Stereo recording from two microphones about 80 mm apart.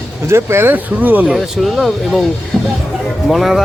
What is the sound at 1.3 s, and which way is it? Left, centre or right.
Speech, centre.